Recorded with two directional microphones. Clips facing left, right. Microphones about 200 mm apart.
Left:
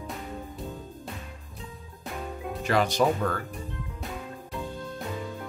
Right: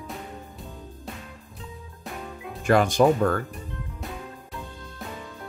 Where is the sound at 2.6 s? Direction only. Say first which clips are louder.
Right 5 dB; 50° right (ahead or behind).